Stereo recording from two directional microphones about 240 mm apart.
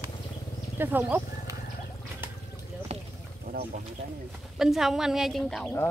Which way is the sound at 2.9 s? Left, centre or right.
Right.